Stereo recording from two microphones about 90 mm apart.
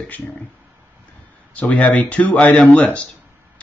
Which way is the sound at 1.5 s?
15° left (ahead or behind).